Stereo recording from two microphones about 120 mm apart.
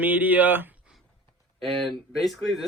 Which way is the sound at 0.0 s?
15° right (ahead or behind).